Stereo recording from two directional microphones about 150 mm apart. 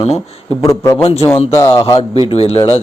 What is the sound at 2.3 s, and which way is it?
Speech, 40° left (ahead or behind).